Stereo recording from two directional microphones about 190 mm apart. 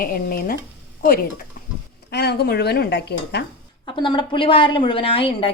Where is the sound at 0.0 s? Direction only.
50° left (ahead or behind).